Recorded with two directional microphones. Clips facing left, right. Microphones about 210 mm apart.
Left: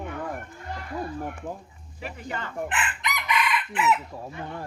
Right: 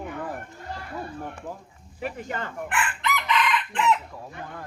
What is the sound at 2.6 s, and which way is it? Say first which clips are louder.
Chicken: right 5 dB; 20° left (ahead or behind).